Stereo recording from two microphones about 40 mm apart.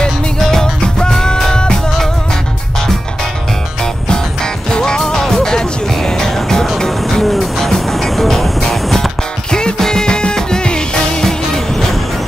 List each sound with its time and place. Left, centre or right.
0.0 s music: centre
3.8 s music: centre
9.5 s music: centre
11.2 s music: centre